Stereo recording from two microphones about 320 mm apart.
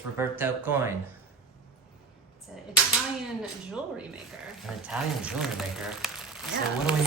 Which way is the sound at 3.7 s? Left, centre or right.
Centre.